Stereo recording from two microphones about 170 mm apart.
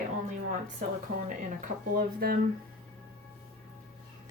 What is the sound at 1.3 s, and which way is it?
A woman's voice, 50° right (ahead or behind).